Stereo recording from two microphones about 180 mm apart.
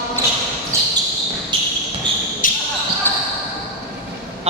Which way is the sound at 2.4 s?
50° left (ahead or behind).